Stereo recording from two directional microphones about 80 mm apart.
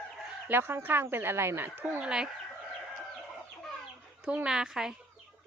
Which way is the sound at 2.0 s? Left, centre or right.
Centre.